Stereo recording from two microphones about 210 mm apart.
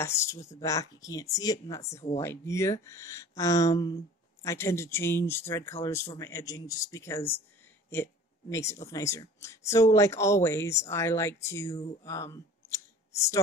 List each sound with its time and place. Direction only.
0.0 s speech: 15° left (ahead or behind)